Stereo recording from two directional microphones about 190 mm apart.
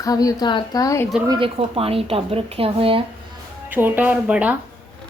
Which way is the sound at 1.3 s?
30° right (ahead or behind).